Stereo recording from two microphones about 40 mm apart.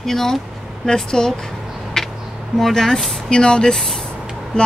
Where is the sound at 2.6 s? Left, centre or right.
Centre.